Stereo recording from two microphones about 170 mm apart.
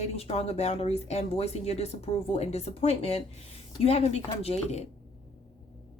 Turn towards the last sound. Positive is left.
turn(degrees=40)  # may be behind; listen again after turning